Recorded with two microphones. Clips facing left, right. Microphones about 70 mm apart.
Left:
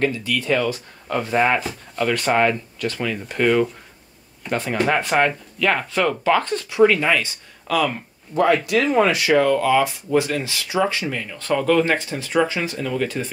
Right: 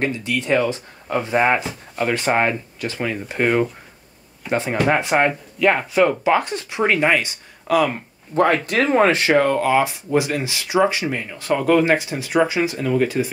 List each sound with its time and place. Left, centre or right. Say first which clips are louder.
0.0 s speech: left 1 dB; right
6.8 s speech: left 2 dB; right
8.4 s speech: even; right
10.1 s speech: even; centre